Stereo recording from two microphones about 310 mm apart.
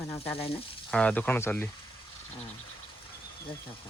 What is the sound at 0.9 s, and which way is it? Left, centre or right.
Speech, centre.